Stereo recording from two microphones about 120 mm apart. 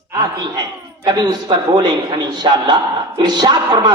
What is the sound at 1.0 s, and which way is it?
A man's voice, 35° right (ahead or behind).